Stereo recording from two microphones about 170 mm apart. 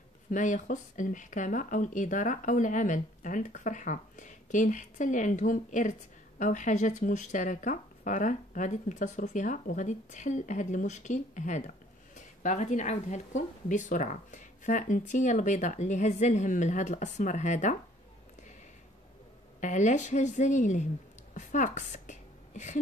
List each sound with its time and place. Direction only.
0.3 s speech: 50° left (ahead or behind)
19.6 s speech: 45° left (ahead or behind)